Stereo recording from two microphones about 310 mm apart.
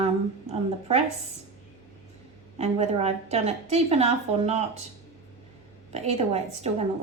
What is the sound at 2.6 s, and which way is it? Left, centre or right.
A woman's voice, right.